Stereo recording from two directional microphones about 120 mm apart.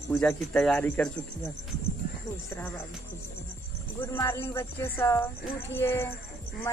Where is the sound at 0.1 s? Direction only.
5° left (ahead or behind).